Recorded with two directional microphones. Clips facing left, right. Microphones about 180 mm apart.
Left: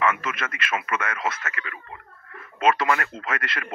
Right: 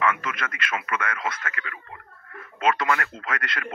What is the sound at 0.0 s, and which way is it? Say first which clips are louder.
A man's voice: left 1 dB; 25° left (ahead or behind).